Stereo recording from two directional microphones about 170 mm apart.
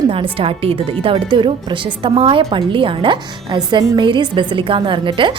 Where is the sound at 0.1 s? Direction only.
30° right (ahead or behind).